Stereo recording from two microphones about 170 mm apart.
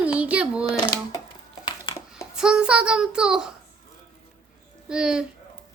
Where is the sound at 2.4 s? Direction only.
5° right (ahead or behind).